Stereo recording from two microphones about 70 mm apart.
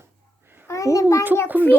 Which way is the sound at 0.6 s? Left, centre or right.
Left.